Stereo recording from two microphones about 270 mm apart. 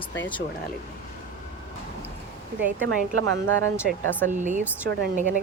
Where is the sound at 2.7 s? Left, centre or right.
Right.